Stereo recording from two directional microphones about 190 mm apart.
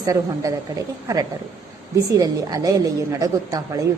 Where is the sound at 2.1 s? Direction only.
20° right (ahead or behind).